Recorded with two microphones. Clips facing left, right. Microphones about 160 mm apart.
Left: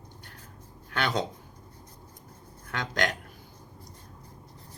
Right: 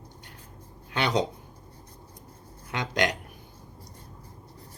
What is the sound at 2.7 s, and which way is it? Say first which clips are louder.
Speech: right 3 dB; 15° right (ahead or behind).